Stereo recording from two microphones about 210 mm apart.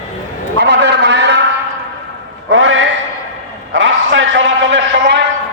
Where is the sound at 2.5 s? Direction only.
70° right (ahead or behind).